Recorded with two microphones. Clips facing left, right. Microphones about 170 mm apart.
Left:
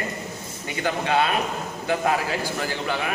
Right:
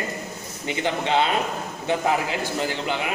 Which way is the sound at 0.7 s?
20° right (ahead or behind).